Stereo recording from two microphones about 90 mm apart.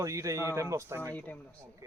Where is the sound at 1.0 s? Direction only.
20° left (ahead or behind).